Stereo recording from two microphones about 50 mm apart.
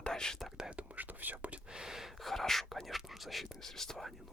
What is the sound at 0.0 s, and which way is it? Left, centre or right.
Whispering, centre.